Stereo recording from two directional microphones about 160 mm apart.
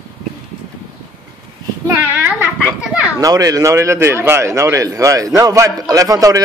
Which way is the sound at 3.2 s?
20° right (ahead or behind).